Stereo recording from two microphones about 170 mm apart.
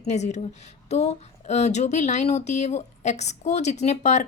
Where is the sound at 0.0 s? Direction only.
45° left (ahead or behind).